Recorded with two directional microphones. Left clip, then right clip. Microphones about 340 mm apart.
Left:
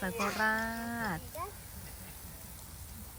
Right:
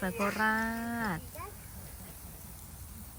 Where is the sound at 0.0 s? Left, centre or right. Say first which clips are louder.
Right 1 dB; centre.